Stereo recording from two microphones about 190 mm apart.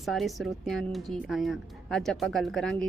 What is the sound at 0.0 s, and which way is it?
Speech, centre (ahead or behind).